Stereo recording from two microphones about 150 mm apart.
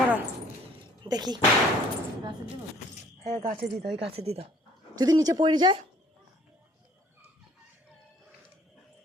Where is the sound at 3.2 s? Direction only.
55° right (ahead or behind).